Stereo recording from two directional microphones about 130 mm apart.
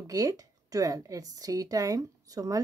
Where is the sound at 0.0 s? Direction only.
25° right (ahead or behind).